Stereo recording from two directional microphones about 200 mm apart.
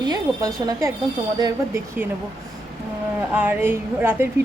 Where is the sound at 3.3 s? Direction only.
10° right (ahead or behind).